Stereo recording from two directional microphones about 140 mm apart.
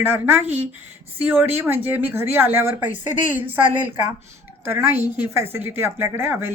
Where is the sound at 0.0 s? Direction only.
15° right (ahead or behind).